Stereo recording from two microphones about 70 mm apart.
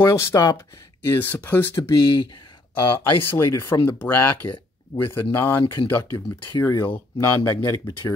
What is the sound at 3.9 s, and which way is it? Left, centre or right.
Speech, left.